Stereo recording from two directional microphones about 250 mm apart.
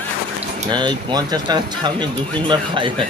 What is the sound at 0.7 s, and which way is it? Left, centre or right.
A man's voice, centre.